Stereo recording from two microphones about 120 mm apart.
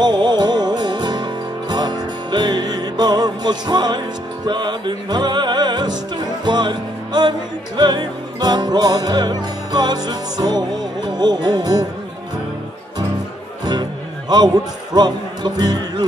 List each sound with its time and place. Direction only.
0.0 s music: 35° right (ahead or behind)
14.3 s a man's voice: 35° right (ahead or behind)